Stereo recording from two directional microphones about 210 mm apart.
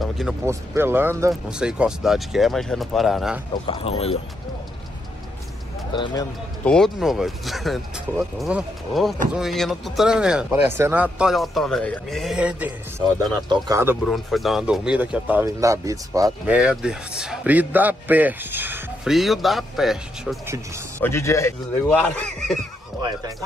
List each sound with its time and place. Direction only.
0.5 s a man's voice: 10° right (ahead or behind)
3.6 s speech: 25° left (ahead or behind)
5.9 s speech: 20° left (ahead or behind)
6.6 s a man's voice: 5° left (ahead or behind); by 13.9 s 15° right (ahead or behind)
14.0 s a man's voice: centre (ahead or behind)
16.5 s a man's voice: 5° right (ahead or behind)
20.4 s speech: 15° right (ahead or behind)
21.0 s a man's voice: 15° left (ahead or behind)